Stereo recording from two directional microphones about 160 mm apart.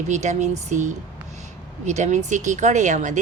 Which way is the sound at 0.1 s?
50° right (ahead or behind).